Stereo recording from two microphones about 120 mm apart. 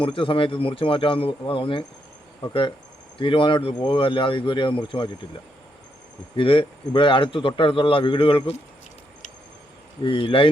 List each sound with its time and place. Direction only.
0.0 s speech: 45° left (ahead or behind)
6.3 s speech: 45° left (ahead or behind)
10.0 s speech: 45° left (ahead or behind)